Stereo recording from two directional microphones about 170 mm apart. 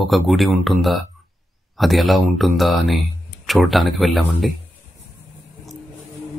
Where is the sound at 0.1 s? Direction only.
Centre (ahead or behind).